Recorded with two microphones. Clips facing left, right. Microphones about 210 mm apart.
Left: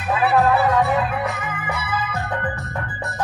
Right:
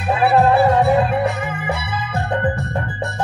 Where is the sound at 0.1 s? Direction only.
30° right (ahead or behind).